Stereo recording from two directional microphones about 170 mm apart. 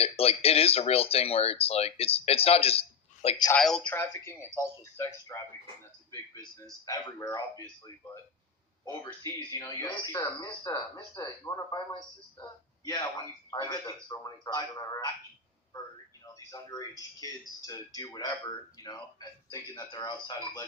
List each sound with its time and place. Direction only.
0.0 s speech: 35° left (ahead or behind)
3.5 s speech: 5° left (ahead or behind)
4.3 s a man's voice: 15° left (ahead or behind)
8.8 s speech: 20° left (ahead or behind)
12.9 s speech: 25° left (ahead or behind)
16.2 s a man's voice: 20° left (ahead or behind)